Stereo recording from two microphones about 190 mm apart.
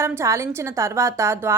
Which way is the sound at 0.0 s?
15° right (ahead or behind).